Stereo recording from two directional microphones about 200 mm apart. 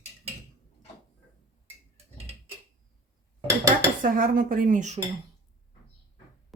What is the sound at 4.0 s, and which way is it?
Speech, 45° right (ahead or behind).